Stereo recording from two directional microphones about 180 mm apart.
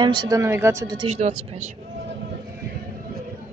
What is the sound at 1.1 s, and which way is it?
Speech, 35° right (ahead or behind).